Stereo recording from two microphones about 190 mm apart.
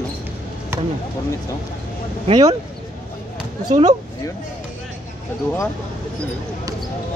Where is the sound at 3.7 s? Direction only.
20° right (ahead or behind).